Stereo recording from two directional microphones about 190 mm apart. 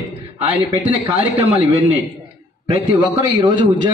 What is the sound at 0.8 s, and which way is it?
Speech, 25° right (ahead or behind).